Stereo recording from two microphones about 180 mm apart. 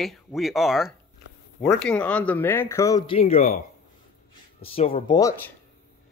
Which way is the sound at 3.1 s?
35° left (ahead or behind).